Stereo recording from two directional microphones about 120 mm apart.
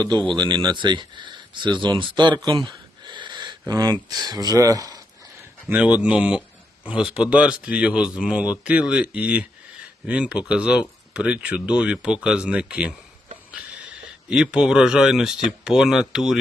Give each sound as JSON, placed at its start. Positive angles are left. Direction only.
{"t": 0.3, "sound": "speech", "side_deg": -40}
{"t": 3.0, "sound": "a sound", "side_deg": -40}
{"t": 3.7, "sound": "speech", "side_deg": -40}
{"t": 5.6, "sound": "speech", "side_deg": -10}